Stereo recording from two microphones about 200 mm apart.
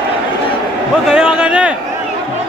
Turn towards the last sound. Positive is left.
turn(degrees=-5)  # may be behind; listen again after turning